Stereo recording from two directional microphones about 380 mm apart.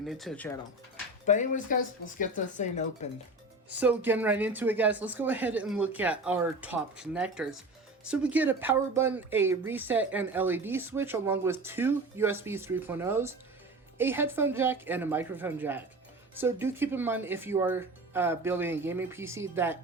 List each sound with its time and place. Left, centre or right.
0.0 s speech: centre
1.3 s speech: centre
3.7 s speech: centre